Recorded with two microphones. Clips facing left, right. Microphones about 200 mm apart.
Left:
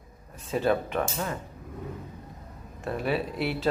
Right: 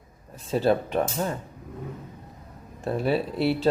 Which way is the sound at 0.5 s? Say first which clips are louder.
Right 3 dB; 35° right (ahead or behind).